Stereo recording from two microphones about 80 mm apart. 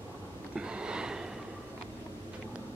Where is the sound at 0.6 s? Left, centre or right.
Centre.